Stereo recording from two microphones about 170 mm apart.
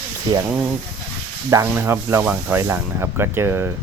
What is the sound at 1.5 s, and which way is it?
Speech, 15° right (ahead or behind).